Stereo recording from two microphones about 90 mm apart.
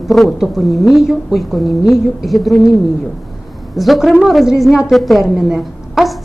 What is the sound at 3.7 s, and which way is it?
A woman's voice, centre (ahead or behind).